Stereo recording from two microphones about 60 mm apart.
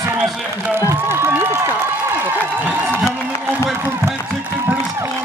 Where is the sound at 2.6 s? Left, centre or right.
Right.